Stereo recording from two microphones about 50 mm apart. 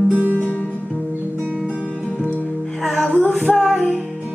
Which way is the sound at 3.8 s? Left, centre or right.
Centre.